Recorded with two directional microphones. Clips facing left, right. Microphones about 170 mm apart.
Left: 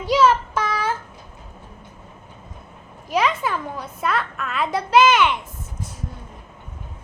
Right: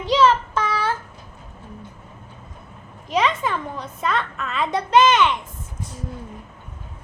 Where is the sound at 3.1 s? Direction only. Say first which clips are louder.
Even; 5° left (ahead or behind).